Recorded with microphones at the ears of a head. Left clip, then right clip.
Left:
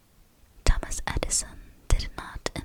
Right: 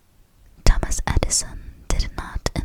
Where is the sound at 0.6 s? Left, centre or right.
Right.